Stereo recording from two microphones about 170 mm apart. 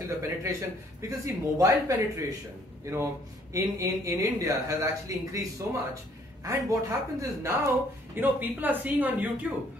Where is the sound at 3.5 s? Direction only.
20° right (ahead or behind).